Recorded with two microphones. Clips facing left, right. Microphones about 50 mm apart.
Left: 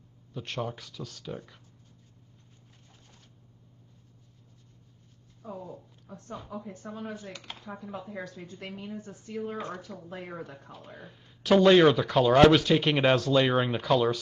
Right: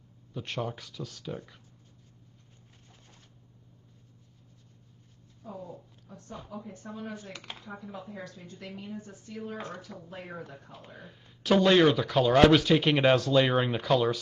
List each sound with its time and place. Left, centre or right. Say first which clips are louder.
0.3 s speech: even; centre
6.9 s speech: left 1 dB; centre
7.2 s speech: left 1 dB; right
9.0 s speech: left 4 dB; left
11.0 s speech: left 1 dB; centre